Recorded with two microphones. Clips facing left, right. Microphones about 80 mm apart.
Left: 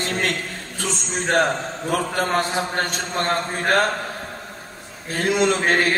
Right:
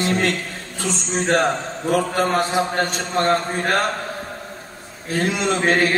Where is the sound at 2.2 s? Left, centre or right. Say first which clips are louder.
Right 3 dB; left.